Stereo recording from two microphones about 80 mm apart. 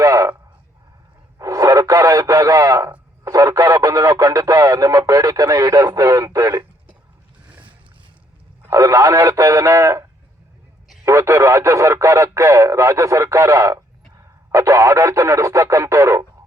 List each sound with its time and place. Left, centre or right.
0.0 s a sound: right
1.4 s radio: right
3.2 s speech: right
8.7 s speech: right